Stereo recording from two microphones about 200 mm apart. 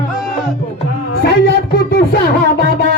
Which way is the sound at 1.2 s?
55° left (ahead or behind).